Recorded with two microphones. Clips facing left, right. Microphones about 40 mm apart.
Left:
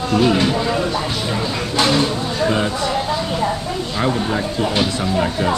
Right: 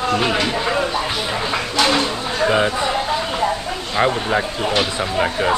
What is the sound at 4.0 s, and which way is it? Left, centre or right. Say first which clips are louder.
Speech: right 3 dB; right.